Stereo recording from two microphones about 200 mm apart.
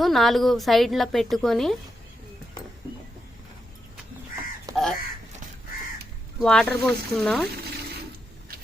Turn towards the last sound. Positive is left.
turn(degrees=0)  # may be behind; listen again after turning